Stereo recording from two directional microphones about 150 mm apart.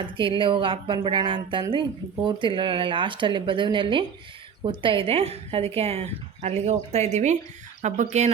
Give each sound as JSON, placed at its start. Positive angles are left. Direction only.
{"t": 0.0, "sound": "speech", "side_deg": -35}